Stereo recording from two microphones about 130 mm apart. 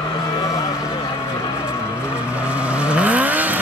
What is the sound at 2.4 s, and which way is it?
Vehicle, 10° right (ahead or behind).